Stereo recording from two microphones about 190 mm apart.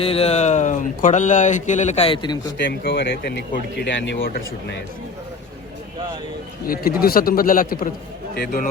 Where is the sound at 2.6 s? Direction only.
65° left (ahead or behind).